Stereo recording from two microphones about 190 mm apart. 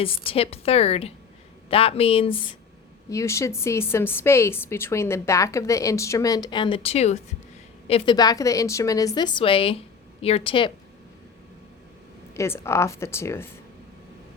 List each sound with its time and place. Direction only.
0.0 s a woman's voice: 30° left (ahead or behind)
3.1 s a woman's voice: 15° left (ahead or behind)
12.3 s a woman's voice: 15° left (ahead or behind)